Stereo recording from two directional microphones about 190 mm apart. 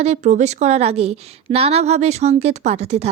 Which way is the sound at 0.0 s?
35° right (ahead or behind).